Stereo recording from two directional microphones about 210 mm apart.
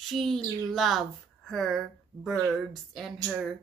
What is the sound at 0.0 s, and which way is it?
Speech, centre (ahead or behind).